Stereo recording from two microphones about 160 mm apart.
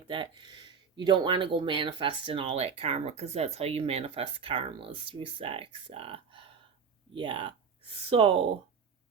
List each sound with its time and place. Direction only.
0.1 s speech: 30° right (ahead or behind)